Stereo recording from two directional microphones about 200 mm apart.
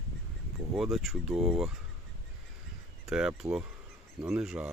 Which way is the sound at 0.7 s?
Centre (ahead or behind).